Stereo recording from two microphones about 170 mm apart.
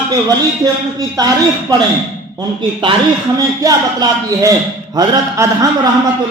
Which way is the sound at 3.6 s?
20° right (ahead or behind).